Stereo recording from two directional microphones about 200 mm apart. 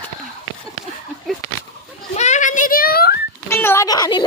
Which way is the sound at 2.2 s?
35° left (ahead or behind).